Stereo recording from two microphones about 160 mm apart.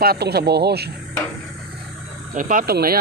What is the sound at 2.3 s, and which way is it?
Speech, 55° right (ahead or behind).